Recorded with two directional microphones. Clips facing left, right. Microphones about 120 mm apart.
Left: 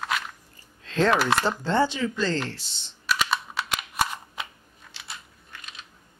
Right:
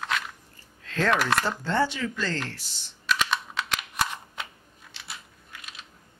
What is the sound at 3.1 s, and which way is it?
Computer keyboard, 5° left (ahead or behind).